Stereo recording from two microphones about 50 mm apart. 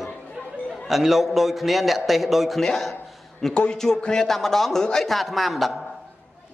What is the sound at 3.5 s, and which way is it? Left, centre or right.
A man's voice, centre.